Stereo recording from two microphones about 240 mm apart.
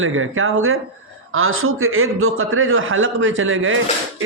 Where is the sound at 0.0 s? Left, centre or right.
Right.